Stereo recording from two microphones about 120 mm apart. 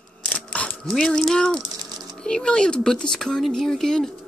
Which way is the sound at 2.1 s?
5° left (ahead or behind).